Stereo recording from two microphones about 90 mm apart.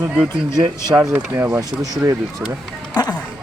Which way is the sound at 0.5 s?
50° right (ahead or behind).